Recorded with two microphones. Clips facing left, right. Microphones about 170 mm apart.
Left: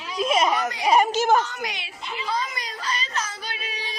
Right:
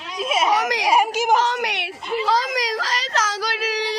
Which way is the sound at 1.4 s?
80° right.